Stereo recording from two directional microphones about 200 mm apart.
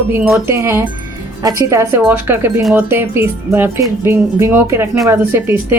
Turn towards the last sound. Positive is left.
turn(degrees=-10)  # may be behind; listen again after turning